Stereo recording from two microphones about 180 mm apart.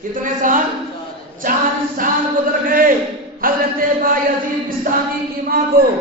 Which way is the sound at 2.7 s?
50° right (ahead or behind).